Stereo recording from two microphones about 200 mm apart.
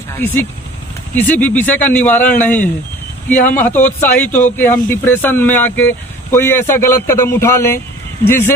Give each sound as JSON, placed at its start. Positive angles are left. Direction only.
{"t": 1.1, "sound": "speech", "side_deg": 10}